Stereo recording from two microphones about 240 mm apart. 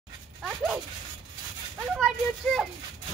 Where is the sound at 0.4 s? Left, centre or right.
Centre.